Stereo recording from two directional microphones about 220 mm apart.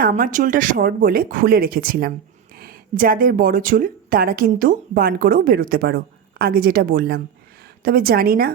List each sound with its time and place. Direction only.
0.0 s a woman's voice: 35° right (ahead or behind)